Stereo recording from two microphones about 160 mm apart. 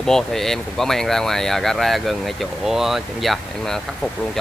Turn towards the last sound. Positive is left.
turn(degrees=5)  # may be behind; listen again after turning